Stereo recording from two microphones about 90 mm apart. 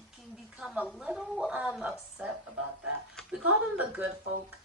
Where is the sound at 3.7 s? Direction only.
15° right (ahead or behind).